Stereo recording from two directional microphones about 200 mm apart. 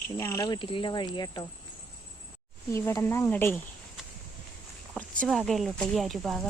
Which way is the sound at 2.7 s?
15° left (ahead or behind).